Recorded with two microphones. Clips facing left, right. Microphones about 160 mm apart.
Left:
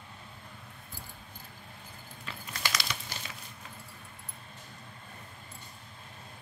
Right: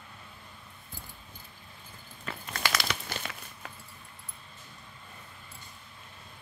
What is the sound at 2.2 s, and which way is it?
Crumpling, 55° right (ahead or behind).